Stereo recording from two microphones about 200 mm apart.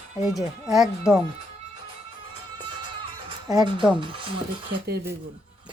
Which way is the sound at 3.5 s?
20° right (ahead or behind).